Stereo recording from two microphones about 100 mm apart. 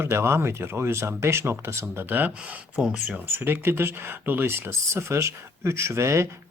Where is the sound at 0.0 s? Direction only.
25° right (ahead or behind); by 3.2 s 10° right (ahead or behind).